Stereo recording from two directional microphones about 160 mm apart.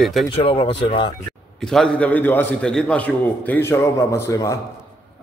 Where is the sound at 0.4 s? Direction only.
35° left (ahead or behind).